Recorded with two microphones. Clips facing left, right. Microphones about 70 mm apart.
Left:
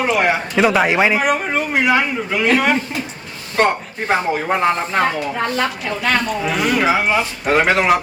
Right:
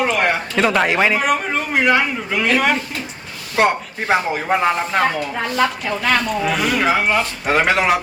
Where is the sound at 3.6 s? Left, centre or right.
Centre.